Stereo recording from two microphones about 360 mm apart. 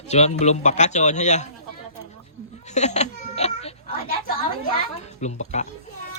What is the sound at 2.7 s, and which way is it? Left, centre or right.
Baby cry, centre.